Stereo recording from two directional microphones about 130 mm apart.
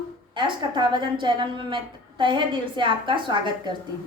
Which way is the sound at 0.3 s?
35° right (ahead or behind).